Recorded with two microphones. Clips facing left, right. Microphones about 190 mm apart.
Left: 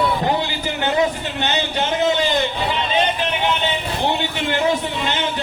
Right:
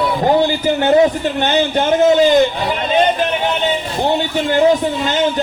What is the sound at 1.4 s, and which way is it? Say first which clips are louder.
Speech: right 6 dB; 45° right (ahead or behind).